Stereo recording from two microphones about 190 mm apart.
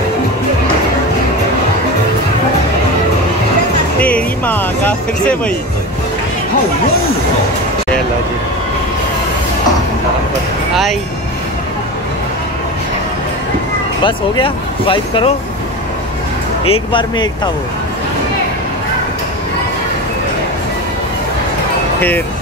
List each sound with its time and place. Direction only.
4.0 s speech: 10° left (ahead or behind)
14.0 s speech: 25° left (ahead or behind)